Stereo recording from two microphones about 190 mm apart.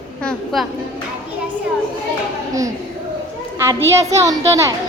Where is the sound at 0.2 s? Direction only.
Centre (ahead or behind).